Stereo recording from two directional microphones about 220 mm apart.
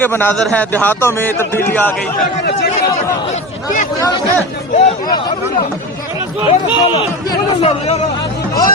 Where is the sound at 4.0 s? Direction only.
15° left (ahead or behind).